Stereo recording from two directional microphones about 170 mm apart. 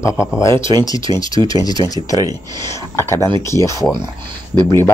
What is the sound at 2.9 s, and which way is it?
Speech, 15° left (ahead or behind).